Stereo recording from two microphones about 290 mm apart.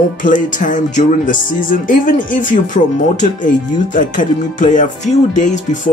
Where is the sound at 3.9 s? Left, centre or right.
Left.